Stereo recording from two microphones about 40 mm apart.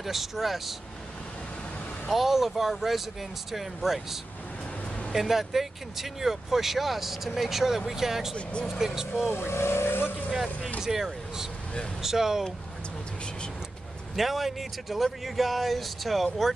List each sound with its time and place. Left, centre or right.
0.0 s speech: centre
2.0 s speech: centre
9.3 s speech: left
10.3 s speech: centre
14.1 s speech: centre